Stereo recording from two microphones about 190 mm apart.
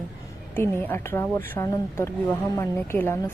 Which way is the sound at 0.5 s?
10° left (ahead or behind).